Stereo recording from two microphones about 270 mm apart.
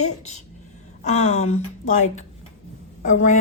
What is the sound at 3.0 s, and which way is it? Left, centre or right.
Speech, left.